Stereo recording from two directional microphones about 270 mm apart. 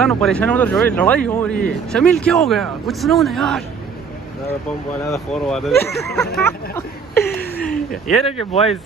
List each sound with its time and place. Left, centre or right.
0.0 s speech: centre
5.0 s speech: centre
7.7 s speech: left